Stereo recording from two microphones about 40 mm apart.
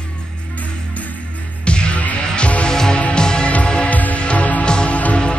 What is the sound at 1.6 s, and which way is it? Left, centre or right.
Music, left.